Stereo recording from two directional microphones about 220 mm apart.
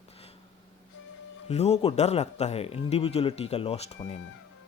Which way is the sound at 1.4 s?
30° left (ahead or behind).